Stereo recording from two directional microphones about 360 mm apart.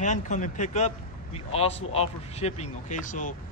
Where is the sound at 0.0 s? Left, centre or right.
Centre.